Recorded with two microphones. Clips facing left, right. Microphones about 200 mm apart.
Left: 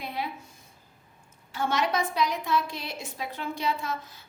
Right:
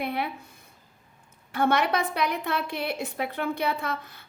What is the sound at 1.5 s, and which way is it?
A woman's voice, 60° right (ahead or behind).